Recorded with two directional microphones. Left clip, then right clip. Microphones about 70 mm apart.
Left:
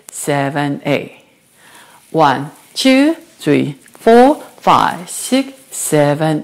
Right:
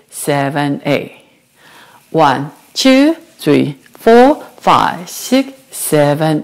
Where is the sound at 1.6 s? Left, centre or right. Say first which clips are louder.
Right 1 dB; right.